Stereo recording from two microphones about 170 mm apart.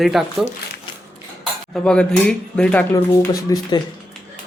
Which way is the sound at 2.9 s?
20° left (ahead or behind).